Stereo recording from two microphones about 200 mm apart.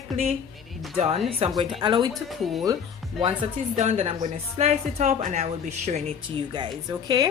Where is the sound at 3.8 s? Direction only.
30° right (ahead or behind).